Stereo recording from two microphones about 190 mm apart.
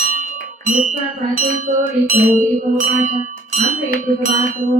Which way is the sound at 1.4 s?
40° right (ahead or behind).